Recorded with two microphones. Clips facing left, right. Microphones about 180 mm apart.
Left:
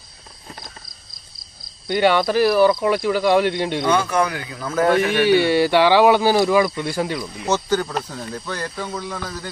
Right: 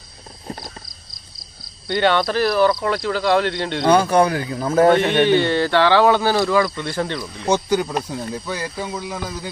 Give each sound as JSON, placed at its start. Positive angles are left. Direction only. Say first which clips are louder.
{"t": 1.9, "sound": "speech", "louder": "left 1 dB", "side_deg": 10}
{"t": 3.8, "sound": "speech", "louder": "right 6 dB", "side_deg": -35}
{"t": 5.2, "sound": "speech", "louder": "left 1 dB", "side_deg": 10}
{"t": 7.4, "sound": "speech", "louder": "right 2 dB", "side_deg": -10}